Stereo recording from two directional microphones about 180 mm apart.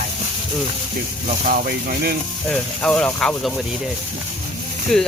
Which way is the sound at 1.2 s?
45° right (ahead or behind).